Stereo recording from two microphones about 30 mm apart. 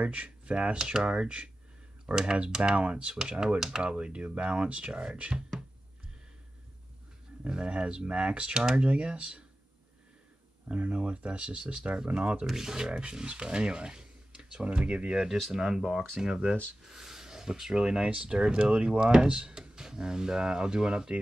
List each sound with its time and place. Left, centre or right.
0.0 s speech: right
0.5 s speech: right
3.3 s speech: centre
3.8 s speech: right
7.4 s speech: right
10.7 s speech: right
12.4 s speech: centre; by 15.1 s right
15.5 s speech: centre
16.9 s a sound: centre
17.7 s speech: right